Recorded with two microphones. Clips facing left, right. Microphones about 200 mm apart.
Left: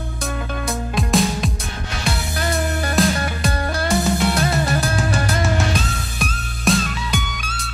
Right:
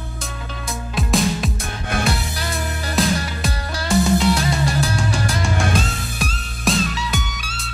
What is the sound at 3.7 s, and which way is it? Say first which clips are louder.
Music: right 4 dB; 55° left (ahead or behind).